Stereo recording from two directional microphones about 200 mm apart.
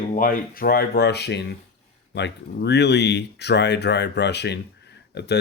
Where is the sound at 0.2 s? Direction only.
45° left (ahead or behind).